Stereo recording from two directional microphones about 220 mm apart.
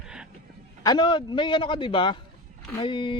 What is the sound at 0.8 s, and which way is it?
Speech, 20° left (ahead or behind).